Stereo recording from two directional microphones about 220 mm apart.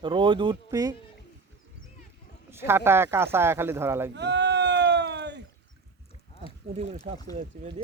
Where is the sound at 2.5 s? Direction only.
10° right (ahead or behind).